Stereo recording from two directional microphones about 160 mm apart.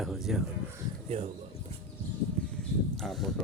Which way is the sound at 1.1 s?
40° right (ahead or behind).